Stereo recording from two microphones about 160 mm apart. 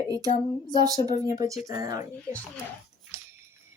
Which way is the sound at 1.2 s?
25° right (ahead or behind).